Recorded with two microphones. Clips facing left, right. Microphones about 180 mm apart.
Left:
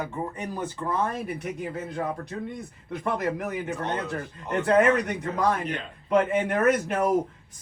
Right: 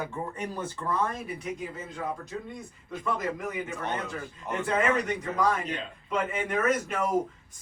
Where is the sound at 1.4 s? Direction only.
65° left (ahead or behind).